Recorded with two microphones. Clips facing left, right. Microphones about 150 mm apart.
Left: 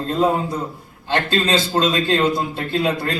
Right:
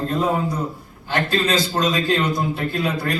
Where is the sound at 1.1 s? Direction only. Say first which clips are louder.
Left 1 dB; 25° left (ahead or behind).